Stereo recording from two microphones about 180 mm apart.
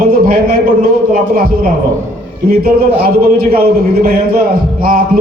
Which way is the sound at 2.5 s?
55° right (ahead or behind).